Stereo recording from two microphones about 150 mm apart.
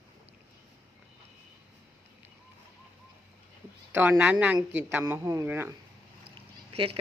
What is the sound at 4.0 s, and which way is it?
Speech, 10° right (ahead or behind).